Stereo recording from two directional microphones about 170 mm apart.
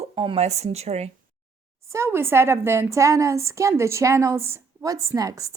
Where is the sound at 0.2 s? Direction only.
35° right (ahead or behind).